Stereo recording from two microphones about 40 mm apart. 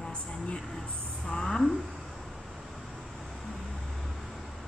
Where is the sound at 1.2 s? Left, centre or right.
Centre.